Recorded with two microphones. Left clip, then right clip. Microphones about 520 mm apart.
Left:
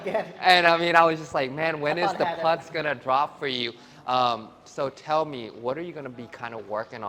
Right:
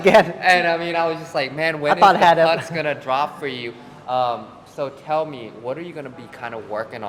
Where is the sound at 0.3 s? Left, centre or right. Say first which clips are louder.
Right 2 dB; left.